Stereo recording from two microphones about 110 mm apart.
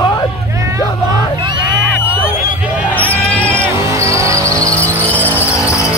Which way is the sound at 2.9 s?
15° left (ahead or behind).